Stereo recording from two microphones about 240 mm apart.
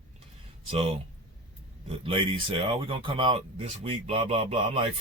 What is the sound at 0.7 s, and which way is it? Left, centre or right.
Speech, right.